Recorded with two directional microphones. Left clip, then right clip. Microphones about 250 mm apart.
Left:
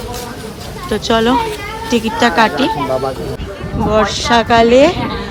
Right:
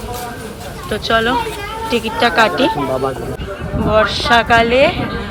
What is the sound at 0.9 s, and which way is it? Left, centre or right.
Speech, centre.